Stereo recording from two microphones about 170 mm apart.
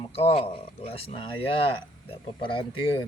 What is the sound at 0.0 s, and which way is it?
Speech, 35° left (ahead or behind).